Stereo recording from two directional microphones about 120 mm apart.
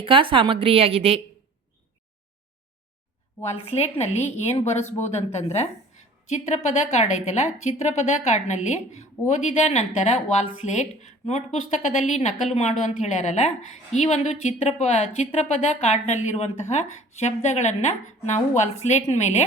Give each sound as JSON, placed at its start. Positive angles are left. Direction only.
{"t": 0.0, "sound": "a woman's voice", "side_deg": -45}
{"t": 3.6, "sound": "a woman's voice", "side_deg": 60}
{"t": 12.5, "sound": "a woman's voice", "side_deg": 70}
{"t": 12.8, "sound": "a woman's voice", "side_deg": 80}